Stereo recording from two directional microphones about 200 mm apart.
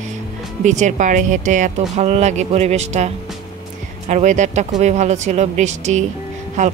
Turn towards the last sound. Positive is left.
turn(degrees=-35)  # may be behind; listen again after turning